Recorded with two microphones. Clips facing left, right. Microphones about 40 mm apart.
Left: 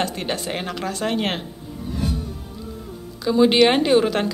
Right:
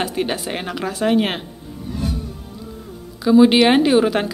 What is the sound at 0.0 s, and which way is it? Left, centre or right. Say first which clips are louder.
A woman's voice: right 3 dB; centre.